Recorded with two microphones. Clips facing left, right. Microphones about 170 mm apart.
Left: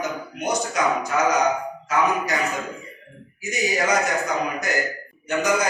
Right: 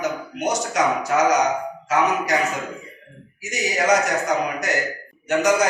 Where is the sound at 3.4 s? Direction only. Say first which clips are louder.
Even; 80° right.